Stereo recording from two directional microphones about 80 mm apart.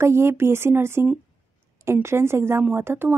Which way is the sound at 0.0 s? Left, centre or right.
Right.